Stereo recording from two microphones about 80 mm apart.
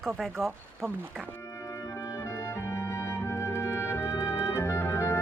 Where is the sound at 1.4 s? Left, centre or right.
Left.